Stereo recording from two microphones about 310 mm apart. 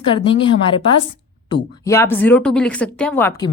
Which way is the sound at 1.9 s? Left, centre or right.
Centre.